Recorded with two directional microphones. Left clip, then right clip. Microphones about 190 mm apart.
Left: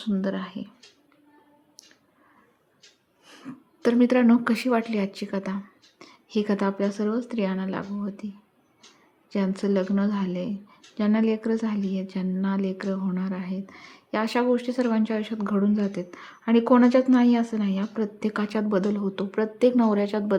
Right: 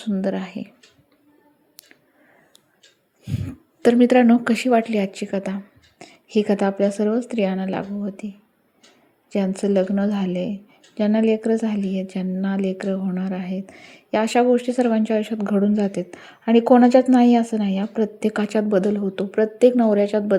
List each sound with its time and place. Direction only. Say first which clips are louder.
0.0 s speech: right 4 dB; 15° right (ahead or behind)
3.2 s speech: right 8 dB; 10° right (ahead or behind)
9.3 s speech: right 5 dB; 15° right (ahead or behind)